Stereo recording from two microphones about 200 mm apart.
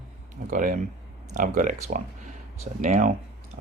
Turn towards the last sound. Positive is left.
turn(degrees=-35)  # may be behind; listen again after turning